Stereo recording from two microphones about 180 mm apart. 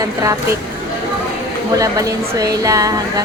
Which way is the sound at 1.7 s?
20° right (ahead or behind).